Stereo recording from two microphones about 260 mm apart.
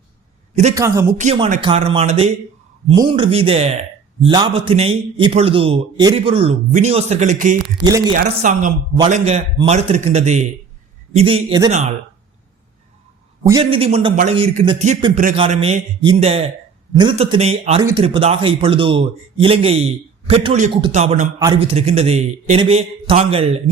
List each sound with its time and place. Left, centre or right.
0.8 s speech: centre
1.2 s a man's voice: right
7.9 s speech: centre
8.1 s a man's voice: right
13.4 s a man's voice: centre